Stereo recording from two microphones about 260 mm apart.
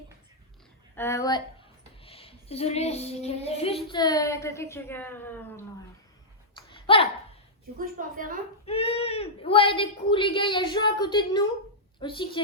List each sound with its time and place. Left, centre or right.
0.9 s speech: centre
6.6 s a sound: centre
7.8 s a woman's voice: right
8.6 s speech: left